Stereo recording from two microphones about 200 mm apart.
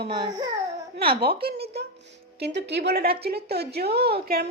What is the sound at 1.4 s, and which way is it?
A woman's voice, 50° right (ahead or behind).